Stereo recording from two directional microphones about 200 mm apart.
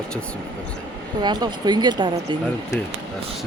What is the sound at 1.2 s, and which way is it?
Speech, 20° right (ahead or behind).